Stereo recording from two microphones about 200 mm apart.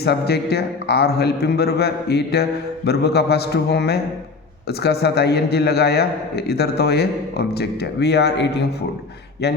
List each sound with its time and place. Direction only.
0.0 s a man's voice: 55° left (ahead or behind)